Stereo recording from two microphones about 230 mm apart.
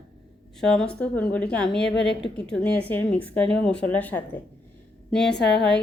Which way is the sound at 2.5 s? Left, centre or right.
Centre.